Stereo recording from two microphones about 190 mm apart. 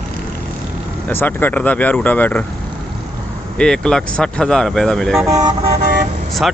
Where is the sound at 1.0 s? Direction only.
10° left (ahead or behind).